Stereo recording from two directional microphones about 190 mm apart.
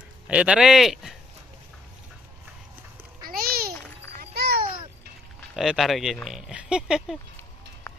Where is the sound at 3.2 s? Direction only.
50° right (ahead or behind).